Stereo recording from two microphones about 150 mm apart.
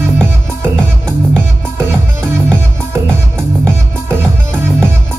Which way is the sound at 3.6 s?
15° right (ahead or behind).